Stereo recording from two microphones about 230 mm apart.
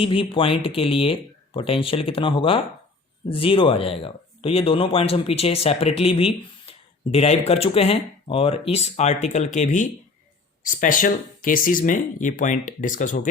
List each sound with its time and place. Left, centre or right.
0.0 s speech: left